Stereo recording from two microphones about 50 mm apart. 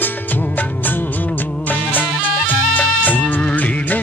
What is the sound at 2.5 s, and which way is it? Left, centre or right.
Music, left.